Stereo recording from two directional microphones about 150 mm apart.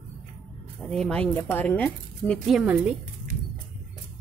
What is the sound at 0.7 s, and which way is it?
Speech, 5° left (ahead or behind).